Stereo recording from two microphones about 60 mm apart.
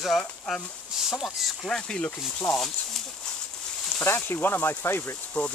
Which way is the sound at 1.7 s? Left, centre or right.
Centre.